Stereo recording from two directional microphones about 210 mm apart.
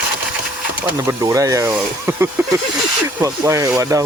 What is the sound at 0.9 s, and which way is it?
Speech, 15° right (ahead or behind).